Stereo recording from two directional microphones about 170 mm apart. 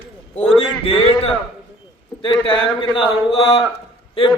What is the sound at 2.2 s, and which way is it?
A man's voice, 30° left (ahead or behind).